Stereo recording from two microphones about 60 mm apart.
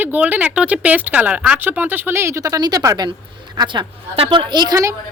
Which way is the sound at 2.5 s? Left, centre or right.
Right.